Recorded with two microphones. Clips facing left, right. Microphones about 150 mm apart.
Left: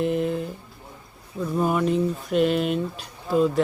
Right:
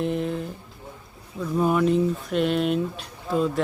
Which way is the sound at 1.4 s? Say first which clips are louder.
Right 1 dB; centre (ahead or behind).